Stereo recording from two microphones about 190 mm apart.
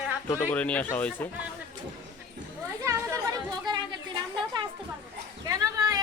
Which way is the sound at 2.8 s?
15° right (ahead or behind).